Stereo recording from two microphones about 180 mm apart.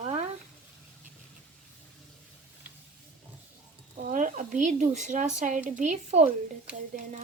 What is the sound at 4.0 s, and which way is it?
Speech, 45° right (ahead or behind).